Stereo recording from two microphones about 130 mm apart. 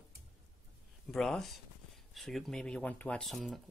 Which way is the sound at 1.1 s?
5° left (ahead or behind).